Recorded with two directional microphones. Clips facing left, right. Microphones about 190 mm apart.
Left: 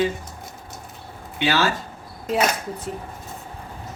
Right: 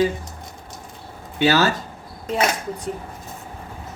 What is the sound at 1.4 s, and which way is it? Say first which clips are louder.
Speech: right 4 dB; 40° right (ahead or behind).